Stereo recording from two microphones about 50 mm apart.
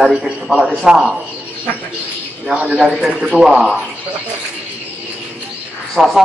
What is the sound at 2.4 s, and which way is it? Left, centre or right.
Speech, right.